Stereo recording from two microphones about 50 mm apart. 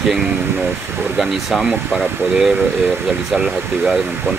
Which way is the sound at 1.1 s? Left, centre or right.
Centre.